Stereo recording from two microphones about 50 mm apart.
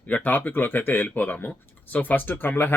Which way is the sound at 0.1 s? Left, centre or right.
Left.